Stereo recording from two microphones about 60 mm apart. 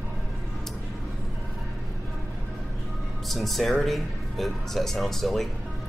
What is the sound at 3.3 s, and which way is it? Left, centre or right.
Speech, centre.